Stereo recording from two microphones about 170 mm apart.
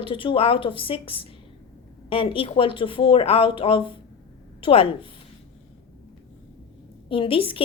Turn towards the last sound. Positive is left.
turn(degrees=30)  # may be behind; listen again after turning